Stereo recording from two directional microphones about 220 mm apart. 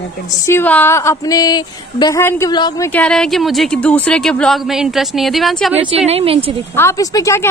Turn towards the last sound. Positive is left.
turn(degrees=15)  # may be behind; listen again after turning